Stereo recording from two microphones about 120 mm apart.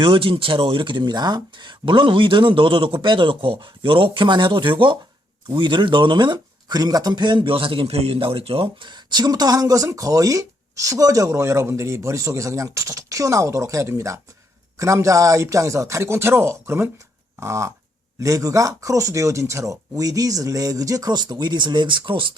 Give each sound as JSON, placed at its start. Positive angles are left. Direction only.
{"t": 0.0, "sound": "speech", "side_deg": -50}